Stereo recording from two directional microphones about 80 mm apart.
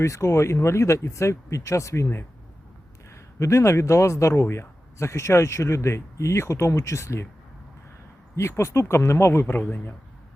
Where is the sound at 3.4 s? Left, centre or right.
Left.